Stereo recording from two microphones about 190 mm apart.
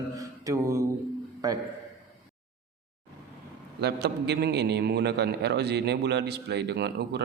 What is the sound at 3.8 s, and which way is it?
A man's voice, 60° right (ahead or behind).